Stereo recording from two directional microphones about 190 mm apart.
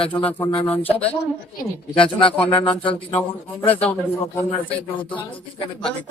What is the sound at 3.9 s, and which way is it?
Speech, 10° left (ahead or behind).